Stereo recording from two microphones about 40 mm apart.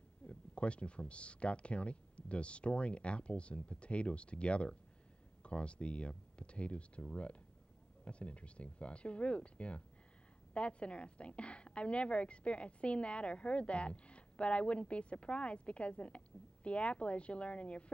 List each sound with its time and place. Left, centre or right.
0.3 s a woman's voice: left